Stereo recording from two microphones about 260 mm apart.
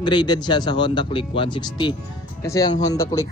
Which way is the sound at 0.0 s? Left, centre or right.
Centre.